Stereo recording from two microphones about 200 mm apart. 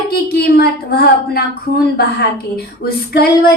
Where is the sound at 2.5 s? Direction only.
50° left (ahead or behind).